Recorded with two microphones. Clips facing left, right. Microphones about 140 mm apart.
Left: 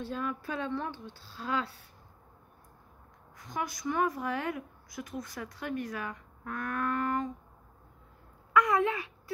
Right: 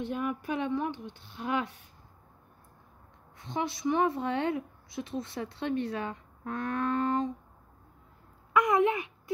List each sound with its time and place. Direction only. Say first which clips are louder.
0.0 s a woman's voice: right 3 dB; 20° right (ahead or behind)
3.3 s a woman's voice: right 3 dB; 25° right (ahead or behind)
8.5 s a woman's voice: right 2 dB; 20° right (ahead or behind)